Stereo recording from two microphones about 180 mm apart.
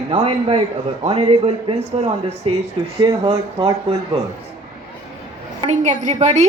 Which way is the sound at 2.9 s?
20° right (ahead or behind).